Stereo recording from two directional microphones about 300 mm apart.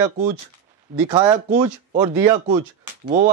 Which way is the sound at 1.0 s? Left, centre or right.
Centre.